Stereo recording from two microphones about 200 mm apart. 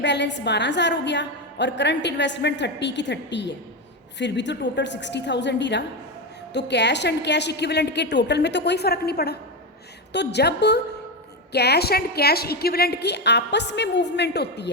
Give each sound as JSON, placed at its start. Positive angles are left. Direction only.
{"t": 0.0, "sound": "a woman's voice", "side_deg": 60}